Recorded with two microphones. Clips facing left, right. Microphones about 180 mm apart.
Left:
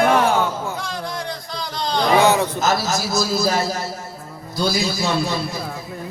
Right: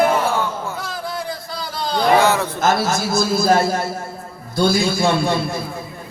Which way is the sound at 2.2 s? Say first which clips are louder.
Left 1 dB; 15° left (ahead or behind).